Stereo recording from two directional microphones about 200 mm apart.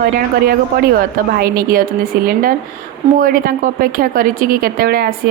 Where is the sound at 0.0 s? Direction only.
50° right (ahead or behind).